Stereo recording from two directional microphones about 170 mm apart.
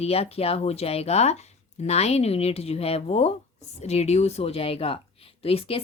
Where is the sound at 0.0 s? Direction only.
35° left (ahead or behind).